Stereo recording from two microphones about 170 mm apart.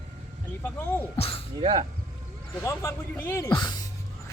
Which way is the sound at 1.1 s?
35° left (ahead or behind).